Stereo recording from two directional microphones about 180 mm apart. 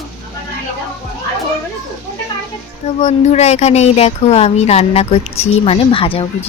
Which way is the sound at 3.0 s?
35° left (ahead or behind).